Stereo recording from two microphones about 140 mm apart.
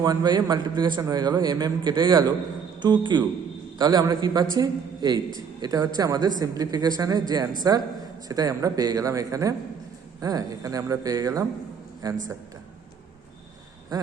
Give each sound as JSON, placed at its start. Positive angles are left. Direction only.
{"t": 0.0, "sound": "a man's voice", "side_deg": -30}